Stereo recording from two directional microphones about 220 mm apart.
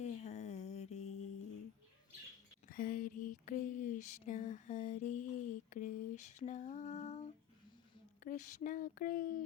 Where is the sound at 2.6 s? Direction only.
40° left (ahead or behind).